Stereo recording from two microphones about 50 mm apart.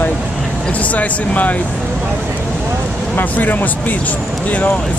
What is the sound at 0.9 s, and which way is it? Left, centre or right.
Speech, left.